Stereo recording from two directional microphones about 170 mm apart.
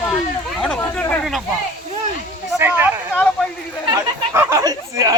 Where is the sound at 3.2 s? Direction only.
10° left (ahead or behind).